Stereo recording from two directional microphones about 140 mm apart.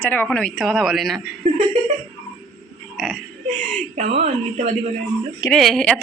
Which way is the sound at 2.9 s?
Centre (ahead or behind).